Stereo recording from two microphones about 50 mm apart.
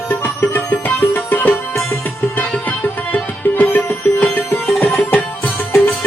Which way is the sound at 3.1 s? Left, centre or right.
Left.